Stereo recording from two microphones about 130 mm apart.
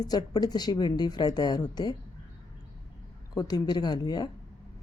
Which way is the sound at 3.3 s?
30° left (ahead or behind).